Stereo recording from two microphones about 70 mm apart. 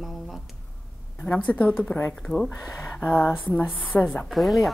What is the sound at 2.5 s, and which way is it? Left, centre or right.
A woman's voice, left.